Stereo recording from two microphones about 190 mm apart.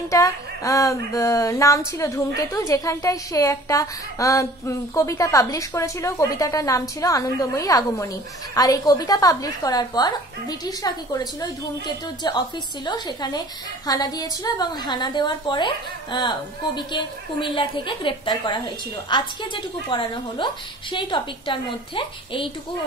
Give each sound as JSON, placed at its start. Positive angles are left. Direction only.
{"t": 0.1, "sound": "a woman's voice", "side_deg": 15}